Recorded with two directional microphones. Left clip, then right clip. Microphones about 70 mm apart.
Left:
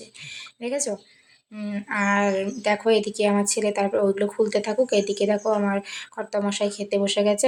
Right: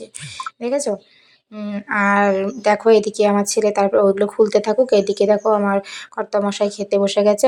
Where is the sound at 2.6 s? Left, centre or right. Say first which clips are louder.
Right 8 dB; right.